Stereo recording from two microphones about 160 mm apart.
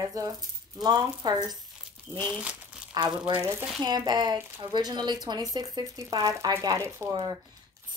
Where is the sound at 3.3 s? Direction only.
15° right (ahead or behind).